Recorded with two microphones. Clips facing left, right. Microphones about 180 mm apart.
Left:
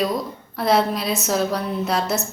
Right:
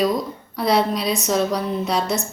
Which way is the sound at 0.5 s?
Centre (ahead or behind).